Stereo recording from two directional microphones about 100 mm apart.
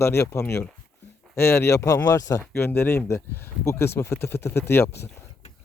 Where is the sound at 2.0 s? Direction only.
35° left (ahead or behind).